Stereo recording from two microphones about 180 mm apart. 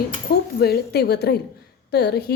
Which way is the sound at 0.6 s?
65° left (ahead or behind).